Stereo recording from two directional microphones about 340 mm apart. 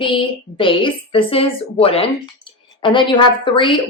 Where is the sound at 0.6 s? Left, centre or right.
Centre.